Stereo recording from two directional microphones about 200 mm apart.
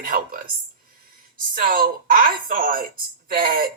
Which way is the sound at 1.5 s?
45° right (ahead or behind).